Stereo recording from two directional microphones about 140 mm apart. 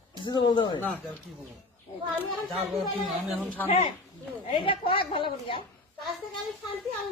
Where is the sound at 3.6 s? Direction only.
45° left (ahead or behind).